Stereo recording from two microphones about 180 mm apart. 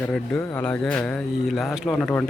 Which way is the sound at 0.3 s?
10° left (ahead or behind).